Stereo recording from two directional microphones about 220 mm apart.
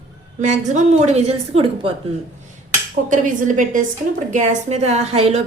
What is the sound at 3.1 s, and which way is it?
A woman's voice, 35° right (ahead or behind).